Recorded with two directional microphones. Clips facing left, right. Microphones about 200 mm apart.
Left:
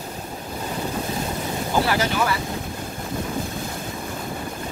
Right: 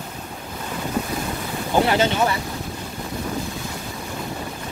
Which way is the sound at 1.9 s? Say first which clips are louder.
Right 3 dB; 25° right (ahead or behind).